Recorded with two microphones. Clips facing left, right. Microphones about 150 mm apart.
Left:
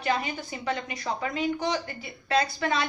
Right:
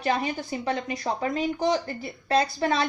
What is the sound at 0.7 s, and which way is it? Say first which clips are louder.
A woman's voice: right 2 dB; 30° right (ahead or behind).